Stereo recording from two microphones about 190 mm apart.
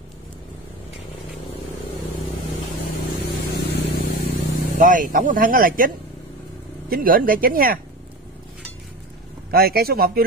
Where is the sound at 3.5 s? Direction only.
60° left (ahead or behind).